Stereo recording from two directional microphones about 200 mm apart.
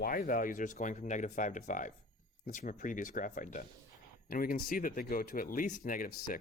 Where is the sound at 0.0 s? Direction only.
45° left (ahead or behind).